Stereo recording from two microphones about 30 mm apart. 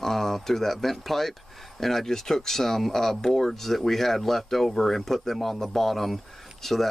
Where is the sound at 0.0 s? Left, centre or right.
Centre.